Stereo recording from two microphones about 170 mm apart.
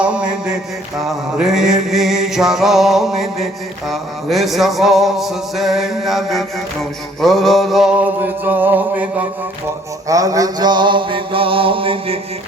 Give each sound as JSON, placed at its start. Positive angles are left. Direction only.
{"t": 0.0, "sound": "mantra", "side_deg": -5}
{"t": 7.2, "sound": "music", "side_deg": 0}
{"t": 10.1, "sound": "mantra", "side_deg": -20}